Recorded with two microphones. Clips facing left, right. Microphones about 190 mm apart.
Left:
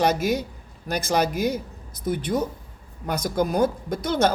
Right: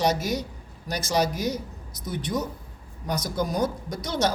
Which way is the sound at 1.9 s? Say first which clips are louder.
Left 5 dB; 55° left (ahead or behind).